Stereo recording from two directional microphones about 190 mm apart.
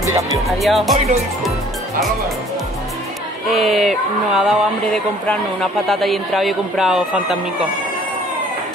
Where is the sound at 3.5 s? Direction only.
Centre (ahead or behind).